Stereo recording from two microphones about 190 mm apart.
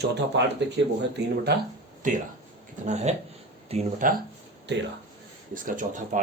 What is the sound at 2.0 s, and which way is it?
Speech, 45° right (ahead or behind).